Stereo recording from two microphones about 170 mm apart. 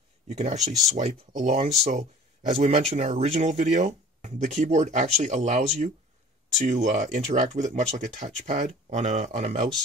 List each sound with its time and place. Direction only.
0.3 s speech: 45° right (ahead or behind)